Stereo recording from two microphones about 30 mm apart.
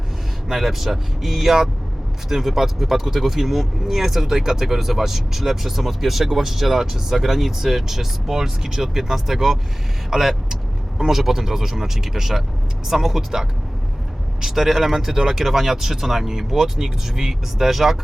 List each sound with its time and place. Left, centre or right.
0.4 s speech: centre
4.6 s speech: centre
10.1 s vehicle: centre
11.0 s speech: centre